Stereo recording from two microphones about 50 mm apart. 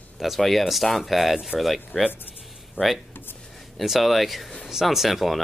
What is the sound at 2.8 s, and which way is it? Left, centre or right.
Speech, left.